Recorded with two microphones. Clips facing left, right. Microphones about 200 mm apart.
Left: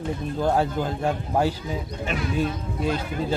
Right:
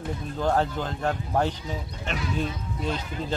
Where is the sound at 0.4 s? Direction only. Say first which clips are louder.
Left 2 dB; 10° left (ahead or behind).